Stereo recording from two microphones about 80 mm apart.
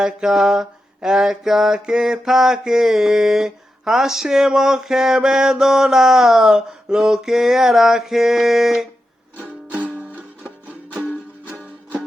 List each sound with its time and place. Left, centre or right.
0.0 s mantra: centre
9.4 s music: centre